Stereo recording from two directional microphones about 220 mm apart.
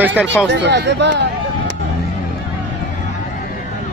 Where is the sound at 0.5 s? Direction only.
50° right (ahead or behind).